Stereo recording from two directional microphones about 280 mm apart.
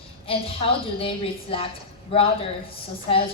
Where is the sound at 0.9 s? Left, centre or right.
Centre.